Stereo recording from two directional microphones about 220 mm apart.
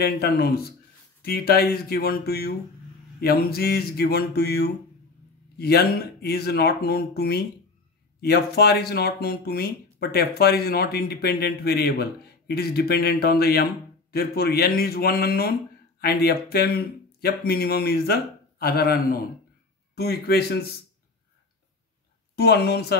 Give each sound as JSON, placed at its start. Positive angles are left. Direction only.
{"t": 0.0, "sound": "speech", "side_deg": 45}
{"t": 22.3, "sound": "speech", "side_deg": 50}